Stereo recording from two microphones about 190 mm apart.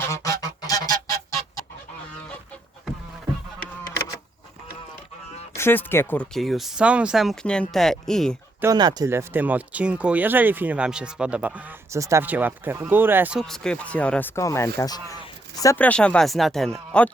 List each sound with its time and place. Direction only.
0.0 s goose: 15° left (ahead or behind)
5.5 s speech: 10° left (ahead or behind)
8.6 s speech: 20° right (ahead or behind)
13.4 s speech: 5° left (ahead or behind); by 15.0 s 20° left (ahead or behind)
15.6 s speech: 10° left (ahead or behind)